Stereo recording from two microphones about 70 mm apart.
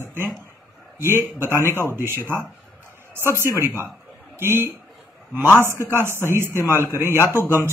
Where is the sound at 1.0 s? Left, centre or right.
Right.